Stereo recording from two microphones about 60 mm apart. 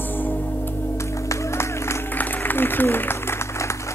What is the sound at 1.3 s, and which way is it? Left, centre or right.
Music, left.